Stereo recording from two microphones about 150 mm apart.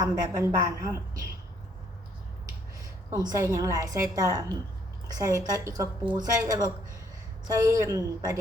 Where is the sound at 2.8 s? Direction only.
25° right (ahead or behind).